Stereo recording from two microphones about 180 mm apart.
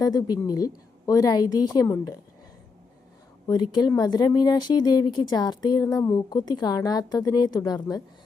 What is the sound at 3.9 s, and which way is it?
Speech, 20° left (ahead or behind).